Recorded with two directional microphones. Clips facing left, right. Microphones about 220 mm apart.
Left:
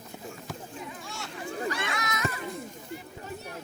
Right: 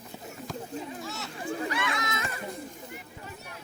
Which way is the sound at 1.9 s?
25° right (ahead or behind).